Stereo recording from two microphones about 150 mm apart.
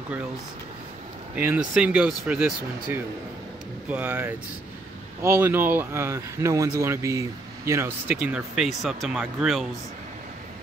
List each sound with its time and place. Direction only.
1.3 s speech: 10° right (ahead or behind)
8.2 s speech: 5° right (ahead or behind)